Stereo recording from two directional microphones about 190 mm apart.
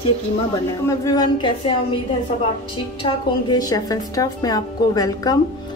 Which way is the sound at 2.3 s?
35° left (ahead or behind).